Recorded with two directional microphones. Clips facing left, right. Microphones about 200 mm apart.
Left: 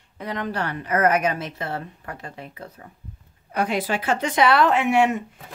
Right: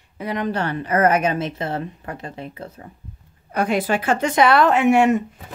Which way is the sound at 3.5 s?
50° right (ahead or behind).